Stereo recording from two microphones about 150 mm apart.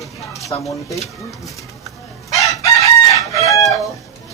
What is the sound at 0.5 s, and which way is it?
Speech, 30° left (ahead or behind).